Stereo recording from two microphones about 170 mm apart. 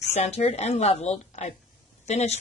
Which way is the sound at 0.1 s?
40° left (ahead or behind).